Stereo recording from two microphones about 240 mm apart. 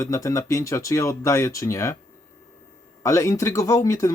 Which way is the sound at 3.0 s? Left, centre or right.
Centre.